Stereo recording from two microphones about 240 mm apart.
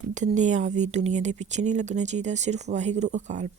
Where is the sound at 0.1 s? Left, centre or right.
Right.